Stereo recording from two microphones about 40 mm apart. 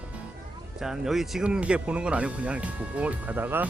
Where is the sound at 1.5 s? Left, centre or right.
Right.